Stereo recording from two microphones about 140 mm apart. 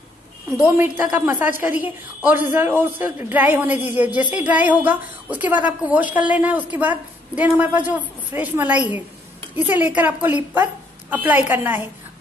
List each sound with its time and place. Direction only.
0.5 s a man's voice: 20° right (ahead or behind)